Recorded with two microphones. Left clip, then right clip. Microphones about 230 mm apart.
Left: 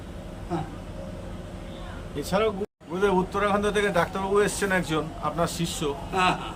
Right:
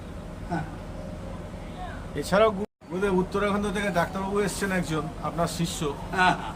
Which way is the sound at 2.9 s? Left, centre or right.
Centre.